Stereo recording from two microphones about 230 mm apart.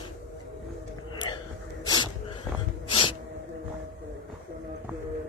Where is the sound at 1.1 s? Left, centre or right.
Centre.